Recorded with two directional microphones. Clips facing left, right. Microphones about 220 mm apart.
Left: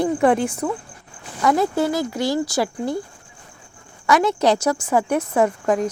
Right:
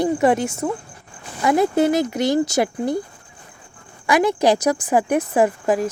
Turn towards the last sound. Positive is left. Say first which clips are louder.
# right 1 dB
turn(degrees=-5)  # may be behind; listen again after turning